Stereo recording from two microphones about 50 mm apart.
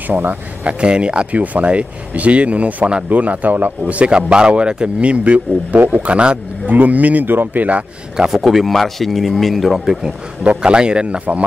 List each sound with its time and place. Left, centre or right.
0.1 s speech: right
0.7 s speech: right
1.3 s speech: right
3.1 s speech: right
8.2 s a man's voice: centre
10.4 s speech: right